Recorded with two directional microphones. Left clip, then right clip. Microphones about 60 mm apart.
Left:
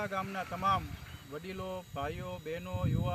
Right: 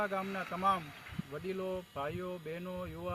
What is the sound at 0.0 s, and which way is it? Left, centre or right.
Speech, centre.